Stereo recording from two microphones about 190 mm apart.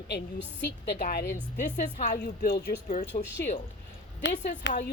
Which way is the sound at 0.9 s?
55° left (ahead or behind).